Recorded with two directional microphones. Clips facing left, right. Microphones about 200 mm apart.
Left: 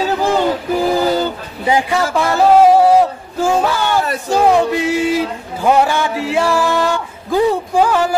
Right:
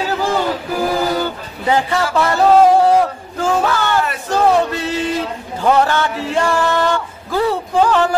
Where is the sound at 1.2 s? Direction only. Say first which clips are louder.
Left 2 dB; 15° left (ahead or behind).